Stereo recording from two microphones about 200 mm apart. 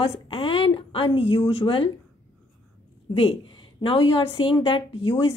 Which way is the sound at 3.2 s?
25° left (ahead or behind).